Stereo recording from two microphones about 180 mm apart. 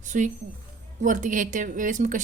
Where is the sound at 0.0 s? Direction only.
45° right (ahead or behind).